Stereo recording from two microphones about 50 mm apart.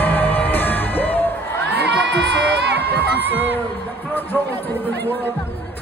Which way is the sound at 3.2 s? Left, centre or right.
Right.